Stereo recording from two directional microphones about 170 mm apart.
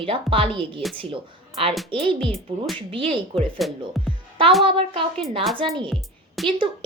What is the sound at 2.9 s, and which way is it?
Speech, 30° right (ahead or behind).